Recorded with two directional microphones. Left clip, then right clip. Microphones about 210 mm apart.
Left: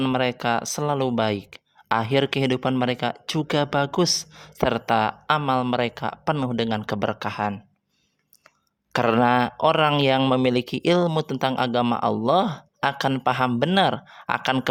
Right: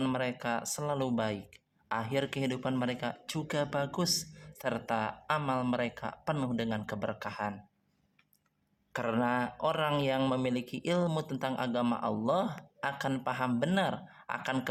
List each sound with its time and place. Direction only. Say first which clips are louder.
0.0 s speech: left 10 dB; 45° left (ahead or behind)
8.9 s speech: left 12 dB; 45° left (ahead or behind)